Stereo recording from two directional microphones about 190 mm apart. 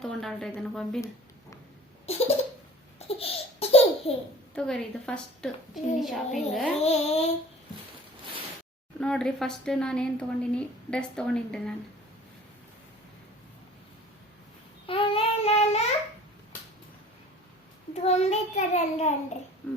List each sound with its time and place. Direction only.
0.0 s speech: centre (ahead or behind)
2.0 s a sound: 35° left (ahead or behind)
3.2 s laughter: 30° left (ahead or behind)
4.5 s speech: 5° left (ahead or behind)
6.7 s a child's voice: 35° left (ahead or behind)
9.0 s speech: 5° left (ahead or behind)
14.8 s child singing: 30° left (ahead or behind)
18.0 s a child's voice: 35° left (ahead or behind)
19.6 s speech: 5° left (ahead or behind)